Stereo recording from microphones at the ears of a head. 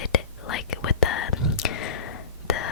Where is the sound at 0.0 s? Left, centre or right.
Left.